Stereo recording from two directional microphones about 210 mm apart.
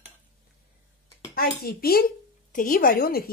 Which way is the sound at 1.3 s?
45° left (ahead or behind).